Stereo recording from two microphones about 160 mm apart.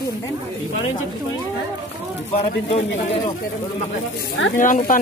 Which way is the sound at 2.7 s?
40° left (ahead or behind).